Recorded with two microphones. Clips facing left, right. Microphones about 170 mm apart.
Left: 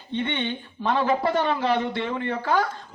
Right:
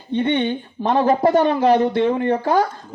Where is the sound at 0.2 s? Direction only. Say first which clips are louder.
Right 8 dB; 45° right (ahead or behind).